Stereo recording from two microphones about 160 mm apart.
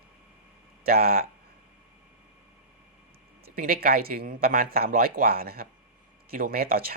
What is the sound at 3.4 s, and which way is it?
Speech, 65° right (ahead or behind).